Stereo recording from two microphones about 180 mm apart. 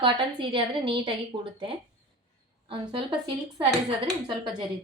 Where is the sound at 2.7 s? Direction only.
25° right (ahead or behind).